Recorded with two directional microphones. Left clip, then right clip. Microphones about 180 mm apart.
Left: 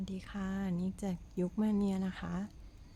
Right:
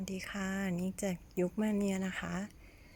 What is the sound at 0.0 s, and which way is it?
Speech, 10° right (ahead or behind).